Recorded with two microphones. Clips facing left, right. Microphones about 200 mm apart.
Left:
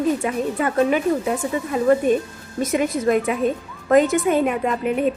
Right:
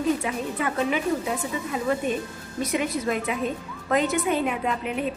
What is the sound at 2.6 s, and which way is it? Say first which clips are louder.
A woman's voice: left 5 dB; 45° left (ahead or behind).